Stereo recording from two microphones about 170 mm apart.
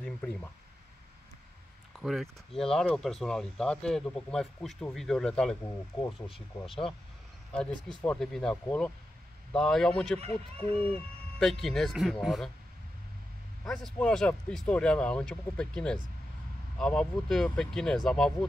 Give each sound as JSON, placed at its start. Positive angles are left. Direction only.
{"t": 0.0, "sound": "speech", "side_deg": 5}
{"t": 2.0, "sound": "a sound", "side_deg": 0}
{"t": 2.6, "sound": "speech", "side_deg": 5}
{"t": 6.7, "sound": "speech", "side_deg": 30}
{"t": 8.0, "sound": "speech", "side_deg": 5}
{"t": 13.7, "sound": "speech", "side_deg": 5}